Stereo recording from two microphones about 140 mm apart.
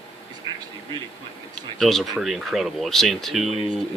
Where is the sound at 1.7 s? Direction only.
Centre (ahead or behind).